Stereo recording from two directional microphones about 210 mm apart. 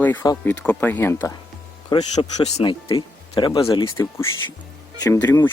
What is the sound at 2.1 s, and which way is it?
Speech, 30° left (ahead or behind).